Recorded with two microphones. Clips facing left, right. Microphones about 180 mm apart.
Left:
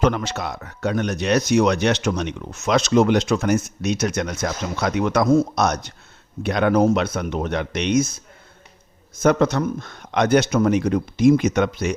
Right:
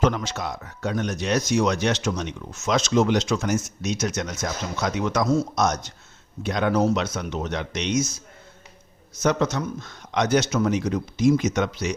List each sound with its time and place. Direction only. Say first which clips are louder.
0.0 s speech: left 2 dB; 60° left (ahead or behind)
9.2 s speech: left 5 dB; 55° left (ahead or behind)